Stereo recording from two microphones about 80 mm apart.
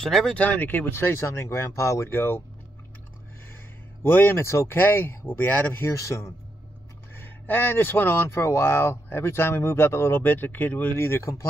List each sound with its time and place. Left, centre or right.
0.0 s speech: centre
0.4 s speech: left
4.0 s speech: left
7.2 s speech: left